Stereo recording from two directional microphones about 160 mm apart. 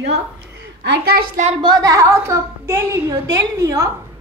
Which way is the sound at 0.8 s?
80° right.